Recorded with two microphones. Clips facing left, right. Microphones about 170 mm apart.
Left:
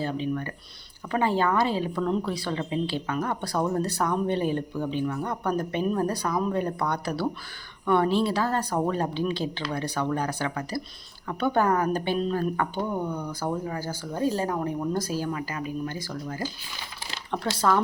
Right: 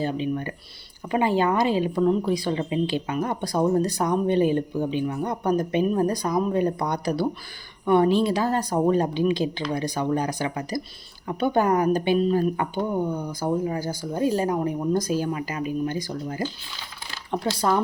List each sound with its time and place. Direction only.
0.0 s speech: 15° right (ahead or behind)